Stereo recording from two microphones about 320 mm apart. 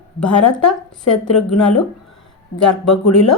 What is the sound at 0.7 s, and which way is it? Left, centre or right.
Speech, centre.